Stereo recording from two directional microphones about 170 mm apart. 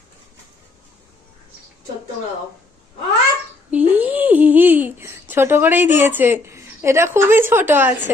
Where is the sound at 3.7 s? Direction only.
10° right (ahead or behind).